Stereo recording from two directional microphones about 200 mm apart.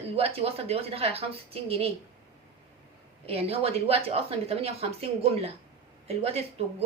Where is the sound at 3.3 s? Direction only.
30° right (ahead or behind).